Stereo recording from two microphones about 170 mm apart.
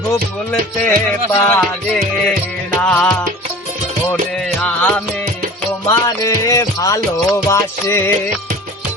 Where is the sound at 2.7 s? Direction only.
10° left (ahead or behind).